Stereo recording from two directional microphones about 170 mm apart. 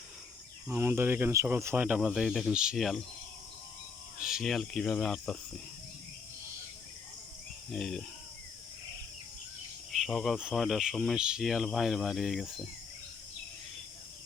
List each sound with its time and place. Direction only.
0.7 s speech: 15° right (ahead or behind)
4.2 s speech: 5° right (ahead or behind)
7.7 s speech: centre (ahead or behind)
9.9 s speech: centre (ahead or behind)